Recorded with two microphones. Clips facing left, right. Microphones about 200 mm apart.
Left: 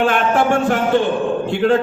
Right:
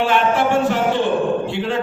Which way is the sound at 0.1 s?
50° left (ahead or behind).